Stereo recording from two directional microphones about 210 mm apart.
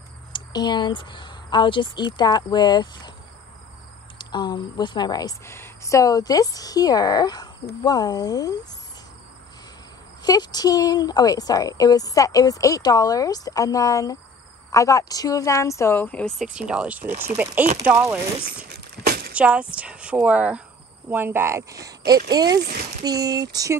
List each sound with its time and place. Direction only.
0.3 s a woman's voice: 20° left (ahead or behind)
4.2 s speech: 20° left (ahead or behind)
10.2 s a woman's voice: 20° left (ahead or behind); by 18.7 s 10° right (ahead or behind)
19.0 s vehicle: 45° right (ahead or behind)
19.3 s a woman's voice: 5° right (ahead or behind)
22.6 s speech: 45° right (ahead or behind)
23.0 s speech: 15° right (ahead or behind)